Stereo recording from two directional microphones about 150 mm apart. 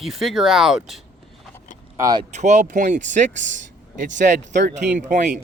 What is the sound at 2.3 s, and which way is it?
Speech, 50° right (ahead or behind).